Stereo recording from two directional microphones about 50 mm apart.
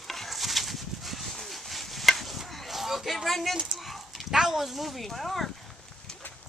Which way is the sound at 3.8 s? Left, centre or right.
Centre.